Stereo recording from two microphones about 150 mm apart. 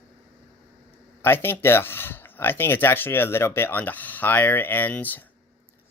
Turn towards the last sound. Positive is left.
turn(degrees=10)  # may be behind; listen again after turning